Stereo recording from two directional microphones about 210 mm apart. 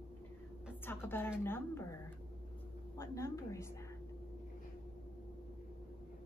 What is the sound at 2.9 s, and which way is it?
Speech, 15° left (ahead or behind).